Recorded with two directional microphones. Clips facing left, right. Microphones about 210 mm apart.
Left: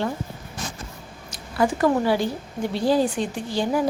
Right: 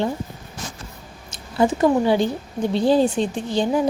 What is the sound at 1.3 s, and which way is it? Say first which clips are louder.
A woman's voice: right 3 dB; 25° right (ahead or behind).